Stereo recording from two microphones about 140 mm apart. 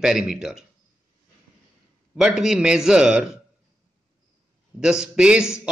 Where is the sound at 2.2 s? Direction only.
5° right (ahead or behind).